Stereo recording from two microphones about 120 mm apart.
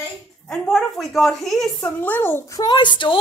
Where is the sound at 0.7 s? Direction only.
Centre (ahead or behind).